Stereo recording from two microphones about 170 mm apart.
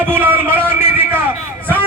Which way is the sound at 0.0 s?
10° right (ahead or behind).